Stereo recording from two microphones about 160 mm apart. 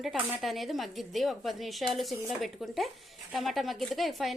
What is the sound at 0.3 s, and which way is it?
Speech, centre (ahead or behind).